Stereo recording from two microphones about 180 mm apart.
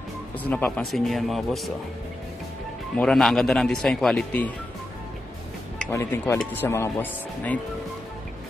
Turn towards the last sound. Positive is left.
turn(degrees=10)  # may be behind; listen again after turning